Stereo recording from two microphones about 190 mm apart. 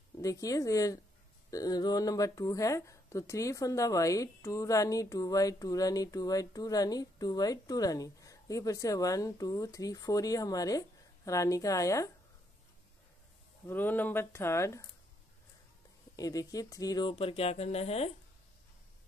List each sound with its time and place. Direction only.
0.2 s speech: 15° left (ahead or behind)
13.7 s speech: 10° left (ahead or behind)
16.2 s speech: 20° left (ahead or behind)